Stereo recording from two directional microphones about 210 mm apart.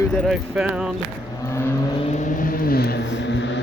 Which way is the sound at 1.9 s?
30° left (ahead or behind).